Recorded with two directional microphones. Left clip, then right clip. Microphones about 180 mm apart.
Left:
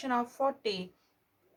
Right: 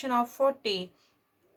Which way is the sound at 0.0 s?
30° right (ahead or behind).